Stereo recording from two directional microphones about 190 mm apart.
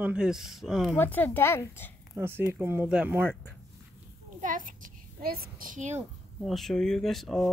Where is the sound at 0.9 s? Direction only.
10° left (ahead or behind).